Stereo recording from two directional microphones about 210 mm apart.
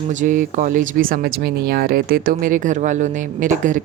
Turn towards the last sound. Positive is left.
turn(degrees=-35)  # may be behind; listen again after turning